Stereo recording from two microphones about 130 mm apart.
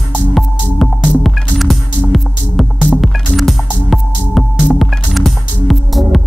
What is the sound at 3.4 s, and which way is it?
Music, centre (ahead or behind).